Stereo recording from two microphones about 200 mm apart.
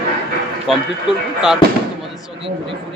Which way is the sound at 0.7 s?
Centre (ahead or behind).